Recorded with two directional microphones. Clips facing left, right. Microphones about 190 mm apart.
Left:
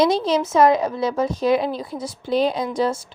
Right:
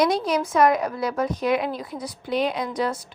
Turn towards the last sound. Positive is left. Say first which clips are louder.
# left 4 dB
turn(degrees=25)  # may be behind; listen again after turning